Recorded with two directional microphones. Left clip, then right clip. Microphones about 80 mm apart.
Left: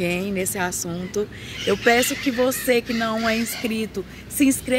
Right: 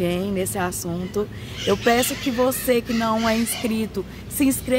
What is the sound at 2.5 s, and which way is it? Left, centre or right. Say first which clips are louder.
A woman's voice: even; centre.